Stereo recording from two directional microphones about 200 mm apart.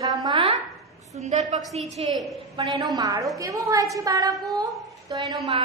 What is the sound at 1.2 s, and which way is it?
Speech, 35° right (ahead or behind).